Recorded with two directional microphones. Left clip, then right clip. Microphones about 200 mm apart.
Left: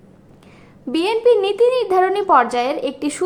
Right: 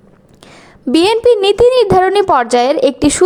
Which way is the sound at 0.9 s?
40° right (ahead or behind).